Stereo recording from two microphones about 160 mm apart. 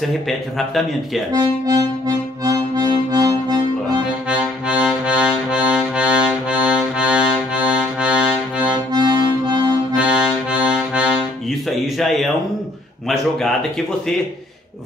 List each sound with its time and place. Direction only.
0.3 s a man's voice: centre (ahead or behind)
1.3 s harmonica: 25° right (ahead or behind)
4.3 s music: 5° right (ahead or behind)
8.9 s music: 25° right (ahead or behind)
9.9 s accordion: 10° right (ahead or behind)
12.0 s a sound: centre (ahead or behind)